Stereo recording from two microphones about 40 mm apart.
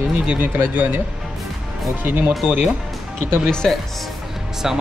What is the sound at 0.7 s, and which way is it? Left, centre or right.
Speech, right.